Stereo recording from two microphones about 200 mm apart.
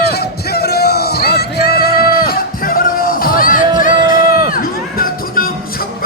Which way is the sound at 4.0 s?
20° right (ahead or behind).